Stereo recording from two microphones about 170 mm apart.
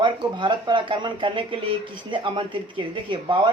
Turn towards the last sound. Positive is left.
turn(degrees=-30)  # may be behind; listen again after turning